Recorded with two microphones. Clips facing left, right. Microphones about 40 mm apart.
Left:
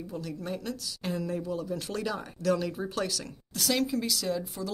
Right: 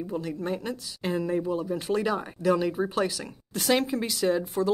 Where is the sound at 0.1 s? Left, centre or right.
Right.